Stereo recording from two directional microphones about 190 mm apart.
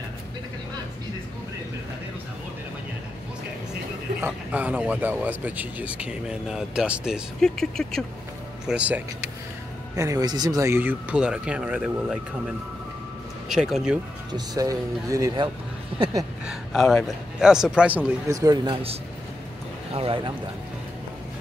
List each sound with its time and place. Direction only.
4.2 s speech: 10° right (ahead or behind)
9.9 s speech: 15° right (ahead or behind)
13.5 s a man's voice: 5° right (ahead or behind)
14.3 s speech: 20° right (ahead or behind)
16.4 s a man's voice: centre (ahead or behind)
18.3 s speech: 20° right (ahead or behind)